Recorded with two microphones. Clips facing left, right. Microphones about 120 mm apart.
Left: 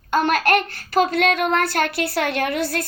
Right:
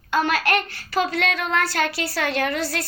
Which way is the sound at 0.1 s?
50° left (ahead or behind).